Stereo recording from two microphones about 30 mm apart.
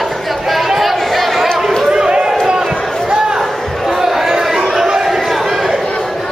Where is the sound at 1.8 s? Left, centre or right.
Right; by 4.3 s centre.